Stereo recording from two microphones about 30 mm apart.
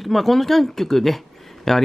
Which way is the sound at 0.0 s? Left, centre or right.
Centre.